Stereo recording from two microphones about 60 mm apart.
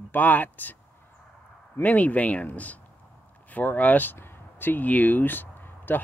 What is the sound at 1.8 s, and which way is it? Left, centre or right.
Speech, left.